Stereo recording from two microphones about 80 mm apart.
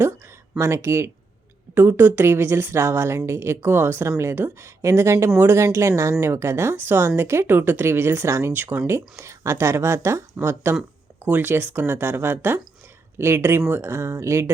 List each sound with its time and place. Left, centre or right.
0.6 s speech: right
8.9 s speech: right